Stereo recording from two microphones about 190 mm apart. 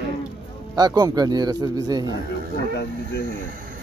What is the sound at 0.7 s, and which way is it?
A man's voice, 20° right (ahead or behind).